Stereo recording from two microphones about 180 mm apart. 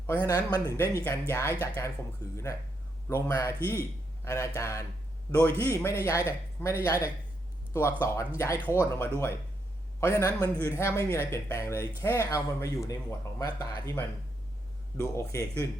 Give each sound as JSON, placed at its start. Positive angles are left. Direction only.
{"t": 0.1, "sound": "speech", "side_deg": 15}
{"t": 14.9, "sound": "speech", "side_deg": 15}